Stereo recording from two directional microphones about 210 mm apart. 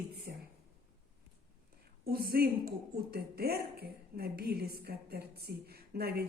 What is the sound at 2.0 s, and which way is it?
A woman's voice, 45° right (ahead or behind).